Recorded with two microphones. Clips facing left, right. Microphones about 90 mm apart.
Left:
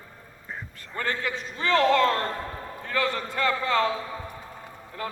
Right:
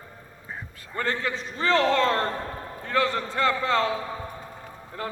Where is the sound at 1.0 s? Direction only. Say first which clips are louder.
Right 1 dB; 35° right (ahead or behind).